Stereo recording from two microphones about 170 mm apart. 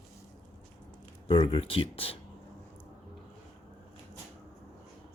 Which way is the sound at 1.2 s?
30° left (ahead or behind).